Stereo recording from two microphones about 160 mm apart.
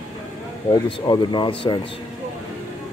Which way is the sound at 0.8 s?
30° left (ahead or behind).